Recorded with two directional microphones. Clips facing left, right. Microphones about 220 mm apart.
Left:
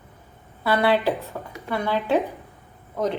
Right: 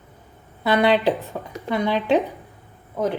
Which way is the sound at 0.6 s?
15° right (ahead or behind).